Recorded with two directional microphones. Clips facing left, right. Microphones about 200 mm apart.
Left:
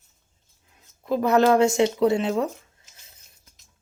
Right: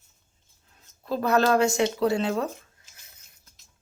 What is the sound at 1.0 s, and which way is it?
Speech, 15° left (ahead or behind).